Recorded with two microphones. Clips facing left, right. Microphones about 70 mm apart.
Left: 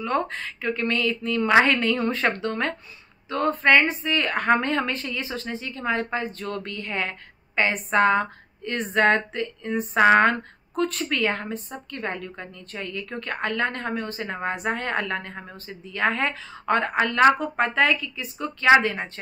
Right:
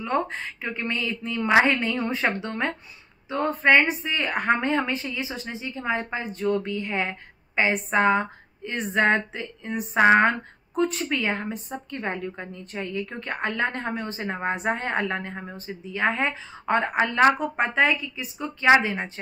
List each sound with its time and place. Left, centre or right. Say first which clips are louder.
0.0 s a woman's voice: even; right